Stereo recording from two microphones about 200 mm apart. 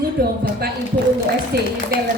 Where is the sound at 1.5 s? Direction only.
50° right (ahead or behind).